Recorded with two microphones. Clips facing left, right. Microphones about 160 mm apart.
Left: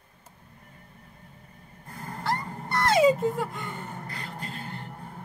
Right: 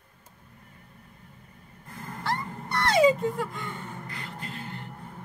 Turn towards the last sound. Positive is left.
turn(degrees=35)  # may be behind; listen again after turning